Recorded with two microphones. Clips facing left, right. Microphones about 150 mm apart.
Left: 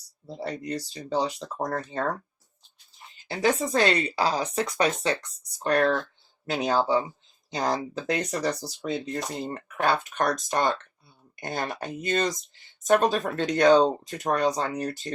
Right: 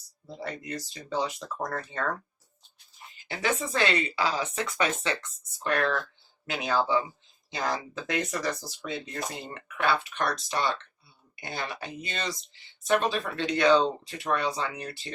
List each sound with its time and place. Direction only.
0.3 s speech: 35° left (ahead or behind)
3.2 s speech: 35° left (ahead or behind)